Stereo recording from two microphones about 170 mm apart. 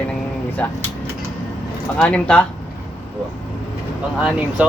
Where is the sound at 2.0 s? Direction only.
5° left (ahead or behind).